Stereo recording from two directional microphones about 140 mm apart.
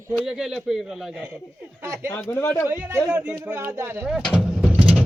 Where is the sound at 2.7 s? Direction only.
15° right (ahead or behind).